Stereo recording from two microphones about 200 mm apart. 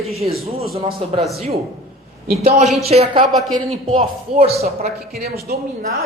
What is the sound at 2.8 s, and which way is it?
Speech, 30° right (ahead or behind).